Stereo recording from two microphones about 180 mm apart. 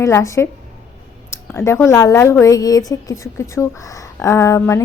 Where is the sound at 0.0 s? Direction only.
15° left (ahead or behind).